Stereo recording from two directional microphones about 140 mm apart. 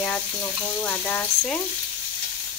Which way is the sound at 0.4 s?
25° left (ahead or behind).